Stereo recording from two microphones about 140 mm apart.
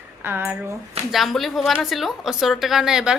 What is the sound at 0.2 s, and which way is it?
Speech, 15° right (ahead or behind).